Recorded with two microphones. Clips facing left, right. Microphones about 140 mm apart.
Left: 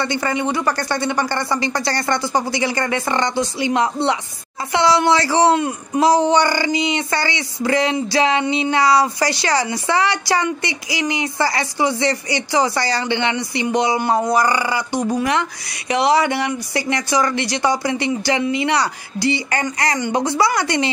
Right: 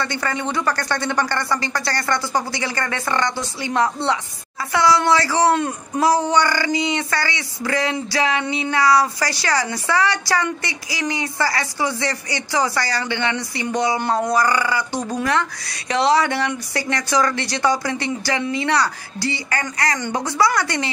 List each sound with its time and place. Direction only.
0.0 s speech: 15° left (ahead or behind)